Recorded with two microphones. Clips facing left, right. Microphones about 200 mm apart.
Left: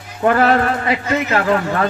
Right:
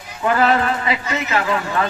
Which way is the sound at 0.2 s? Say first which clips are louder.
Left 3 dB; 50° left (ahead or behind).